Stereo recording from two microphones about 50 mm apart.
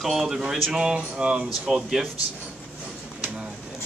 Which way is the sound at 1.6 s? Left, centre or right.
Centre.